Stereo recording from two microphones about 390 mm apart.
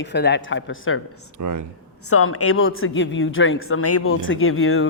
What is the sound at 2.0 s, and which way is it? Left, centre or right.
A woman's voice, left.